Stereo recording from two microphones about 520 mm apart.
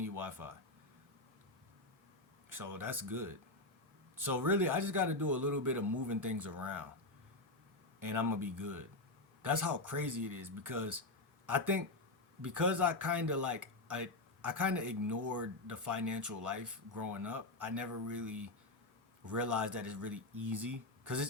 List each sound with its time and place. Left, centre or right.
0.0 s a sound: right
2.5 s speech: right
7.9 s speech: right